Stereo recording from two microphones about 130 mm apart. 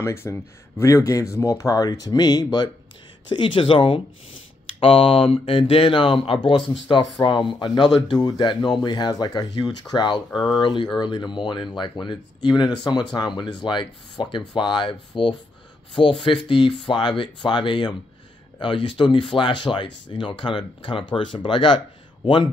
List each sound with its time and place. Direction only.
0.0 s speech: 20° left (ahead or behind); by 22.5 s 35° left (ahead or behind)